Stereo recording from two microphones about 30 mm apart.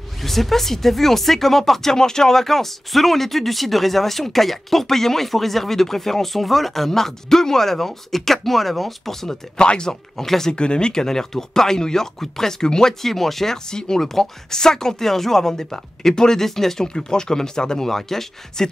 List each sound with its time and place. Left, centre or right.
0.2 s speech: centre
9.6 s speech: left
10.1 s speech: centre
10.5 s speech: left
13.0 s speech: centre
13.7 s speech: left
14.0 s speech: centre
16.8 s speech: left